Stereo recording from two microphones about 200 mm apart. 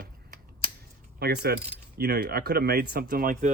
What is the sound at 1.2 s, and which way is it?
Speech, 55° right (ahead or behind).